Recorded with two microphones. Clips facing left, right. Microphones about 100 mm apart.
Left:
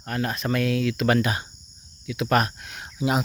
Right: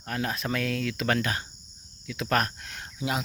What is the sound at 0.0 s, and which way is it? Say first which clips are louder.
Speech: left 3 dB; centre (ahead or behind).